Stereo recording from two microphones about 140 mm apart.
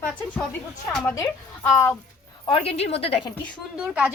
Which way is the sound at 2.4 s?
40° left (ahead or behind).